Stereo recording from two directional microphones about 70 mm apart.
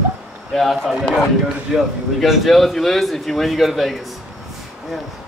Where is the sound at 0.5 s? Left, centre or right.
Centre.